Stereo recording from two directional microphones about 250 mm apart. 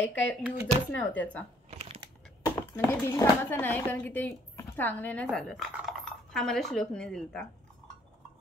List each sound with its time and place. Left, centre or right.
0.0 s speech: centre
1.7 s crumpling: right
2.4 s speech: centre